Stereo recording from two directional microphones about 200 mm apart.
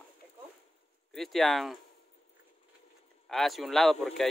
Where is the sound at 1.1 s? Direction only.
Centre (ahead or behind).